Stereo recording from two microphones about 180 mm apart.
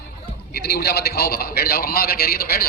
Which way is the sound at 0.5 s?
65° left (ahead or behind).